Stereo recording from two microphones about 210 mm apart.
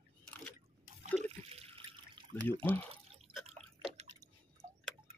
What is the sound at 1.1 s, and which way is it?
Water, 30° right (ahead or behind).